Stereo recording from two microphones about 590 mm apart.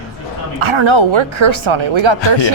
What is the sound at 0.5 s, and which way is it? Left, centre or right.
Speech, right.